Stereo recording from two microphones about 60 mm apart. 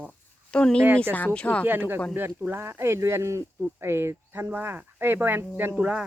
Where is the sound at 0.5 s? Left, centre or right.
Centre.